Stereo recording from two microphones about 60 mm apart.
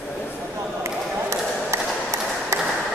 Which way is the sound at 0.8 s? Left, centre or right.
Right.